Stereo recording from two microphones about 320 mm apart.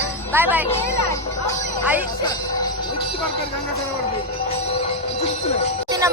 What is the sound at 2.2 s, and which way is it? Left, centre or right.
Jingle bell, centre.